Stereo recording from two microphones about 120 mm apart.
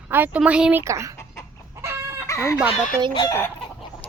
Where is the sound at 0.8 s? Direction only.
25° right (ahead or behind).